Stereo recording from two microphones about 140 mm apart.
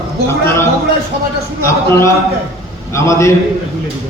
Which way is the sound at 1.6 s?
20° left (ahead or behind).